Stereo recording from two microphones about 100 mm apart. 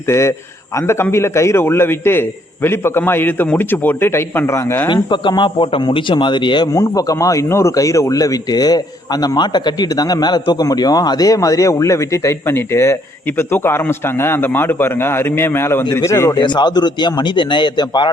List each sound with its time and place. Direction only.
0.1 s a man's voice: 30° left (ahead or behind)
5.0 s a man's voice: 50° left (ahead or behind)
6.7 s speech: 35° left (ahead or behind)
16.4 s a man's voice: 45° left (ahead or behind)